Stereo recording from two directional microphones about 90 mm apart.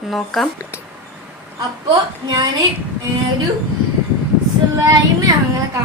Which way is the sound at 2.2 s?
45° right (ahead or behind).